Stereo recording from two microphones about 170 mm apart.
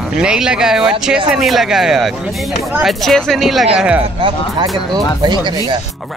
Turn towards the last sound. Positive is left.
turn(degrees=-25)  # may be behind; listen again after turning